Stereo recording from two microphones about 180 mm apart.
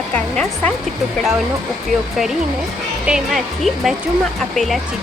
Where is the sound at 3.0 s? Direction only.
Centre (ahead or behind).